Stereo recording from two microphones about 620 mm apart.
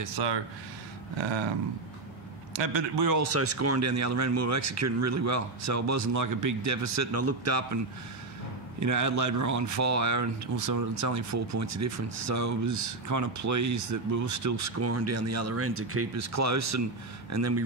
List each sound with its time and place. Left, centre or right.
0.0 s speech: right
2.5 s a man's voice: right
3.1 s speech: right